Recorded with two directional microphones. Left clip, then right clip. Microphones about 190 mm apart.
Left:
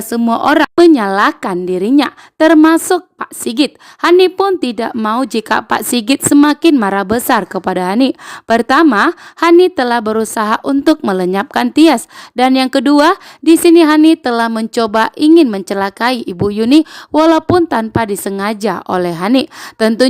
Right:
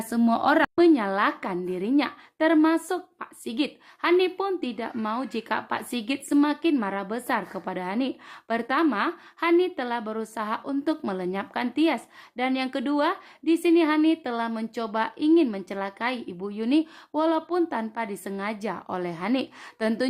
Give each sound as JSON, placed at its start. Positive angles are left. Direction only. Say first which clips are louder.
{"t": 0.1, "sound": "a woman's voice", "louder": "left 10 dB", "side_deg": 45}